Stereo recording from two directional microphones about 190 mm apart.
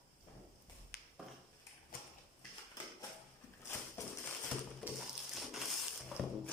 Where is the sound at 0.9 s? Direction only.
55° left (ahead or behind).